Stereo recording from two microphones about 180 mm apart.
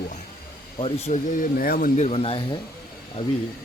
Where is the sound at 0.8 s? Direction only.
35° left (ahead or behind).